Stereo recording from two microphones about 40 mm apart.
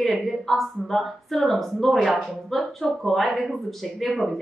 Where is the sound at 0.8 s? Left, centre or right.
Centre.